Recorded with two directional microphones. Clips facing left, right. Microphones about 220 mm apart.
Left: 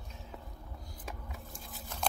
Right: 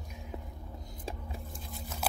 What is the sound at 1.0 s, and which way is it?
Vehicle, 30° right (ahead or behind).